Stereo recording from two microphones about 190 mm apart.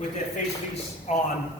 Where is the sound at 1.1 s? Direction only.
35° left (ahead or behind).